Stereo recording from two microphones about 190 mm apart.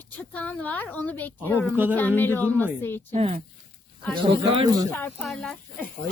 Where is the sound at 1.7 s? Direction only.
10° right (ahead or behind).